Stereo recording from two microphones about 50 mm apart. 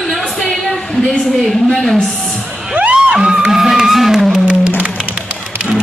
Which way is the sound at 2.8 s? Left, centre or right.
Right.